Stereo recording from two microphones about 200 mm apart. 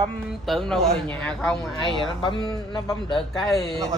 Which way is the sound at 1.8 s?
25° left (ahead or behind).